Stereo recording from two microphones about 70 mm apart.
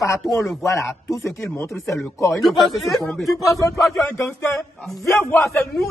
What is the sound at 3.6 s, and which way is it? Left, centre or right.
Speech, left.